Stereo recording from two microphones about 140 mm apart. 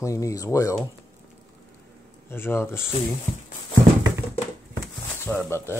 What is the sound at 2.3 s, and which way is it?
Speech, 15° left (ahead or behind).